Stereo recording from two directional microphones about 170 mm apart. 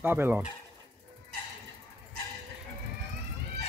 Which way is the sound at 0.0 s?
10° right (ahead or behind).